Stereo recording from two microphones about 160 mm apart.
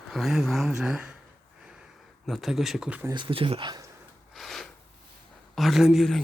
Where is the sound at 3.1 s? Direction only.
30° right (ahead or behind).